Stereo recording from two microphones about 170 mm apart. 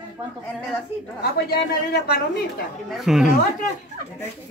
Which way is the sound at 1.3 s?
70° left (ahead or behind).